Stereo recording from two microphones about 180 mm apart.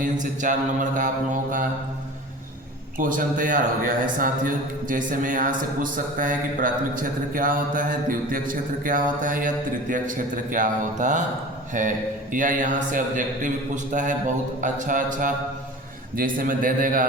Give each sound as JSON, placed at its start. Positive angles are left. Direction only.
{"t": 0.0, "sound": "a man's voice", "side_deg": -45}
{"t": 3.0, "sound": "a man's voice", "side_deg": -50}